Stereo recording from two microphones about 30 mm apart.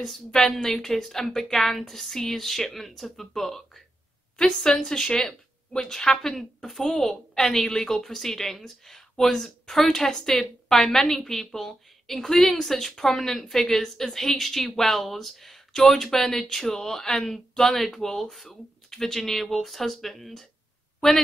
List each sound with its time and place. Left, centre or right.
0.3 s a woman's voice: centre
4.4 s a woman's voice: centre